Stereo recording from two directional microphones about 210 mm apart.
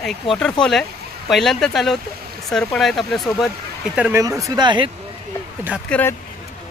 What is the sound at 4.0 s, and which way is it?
Speech, 10° right (ahead or behind).